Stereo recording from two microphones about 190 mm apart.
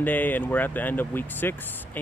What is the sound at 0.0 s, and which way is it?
Speech, 10° left (ahead or behind).